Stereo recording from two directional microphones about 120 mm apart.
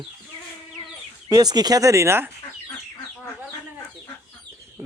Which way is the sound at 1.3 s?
35° right (ahead or behind).